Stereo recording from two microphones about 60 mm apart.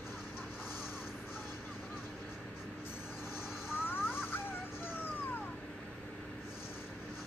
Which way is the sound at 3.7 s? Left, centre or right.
Left.